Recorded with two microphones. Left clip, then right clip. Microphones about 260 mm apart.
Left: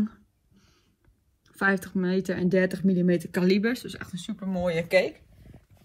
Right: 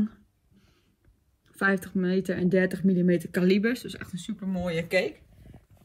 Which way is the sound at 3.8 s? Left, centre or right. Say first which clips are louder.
Left 1 dB; centre.